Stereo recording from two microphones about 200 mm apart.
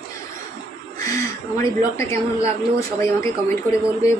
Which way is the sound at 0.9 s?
15° left (ahead or behind).